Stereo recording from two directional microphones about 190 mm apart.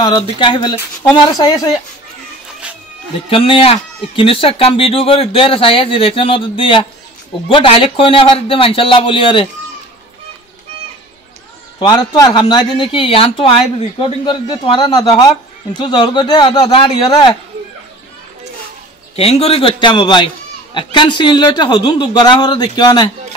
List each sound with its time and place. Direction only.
0.0 s speech: 25° left (ahead or behind)
3.3 s speech: 30° left (ahead or behind)
11.8 s speech: 25° left (ahead or behind)
19.1 s speech: 30° left (ahead or behind)